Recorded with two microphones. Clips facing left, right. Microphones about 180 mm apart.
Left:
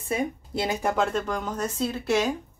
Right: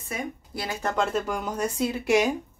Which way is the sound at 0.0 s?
30° left (ahead or behind).